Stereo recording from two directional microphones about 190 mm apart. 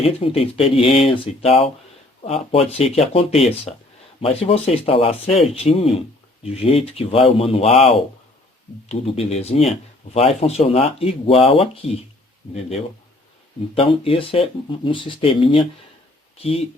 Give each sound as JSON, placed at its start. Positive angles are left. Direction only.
{"t": 0.0, "sound": "speech", "side_deg": 30}
{"t": 13.7, "sound": "speech", "side_deg": 30}